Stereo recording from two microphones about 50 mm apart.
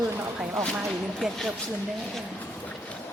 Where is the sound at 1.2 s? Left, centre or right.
Centre.